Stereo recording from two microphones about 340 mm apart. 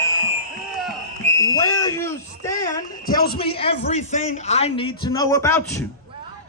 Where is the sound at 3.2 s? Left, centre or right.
Left.